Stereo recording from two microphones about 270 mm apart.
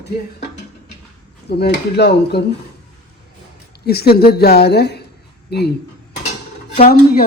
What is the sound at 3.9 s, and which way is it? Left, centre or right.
A woman's voice, left.